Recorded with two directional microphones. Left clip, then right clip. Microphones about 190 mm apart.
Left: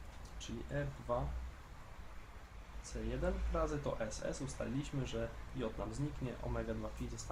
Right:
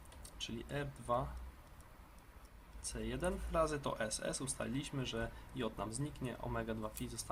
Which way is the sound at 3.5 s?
20° right (ahead or behind).